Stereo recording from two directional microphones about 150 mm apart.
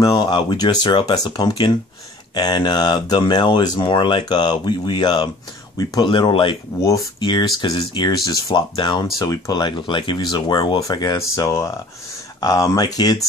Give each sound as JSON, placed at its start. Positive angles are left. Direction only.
{"t": 0.0, "sound": "speech", "side_deg": 25}